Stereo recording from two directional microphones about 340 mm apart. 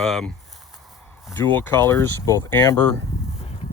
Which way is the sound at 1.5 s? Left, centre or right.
Centre.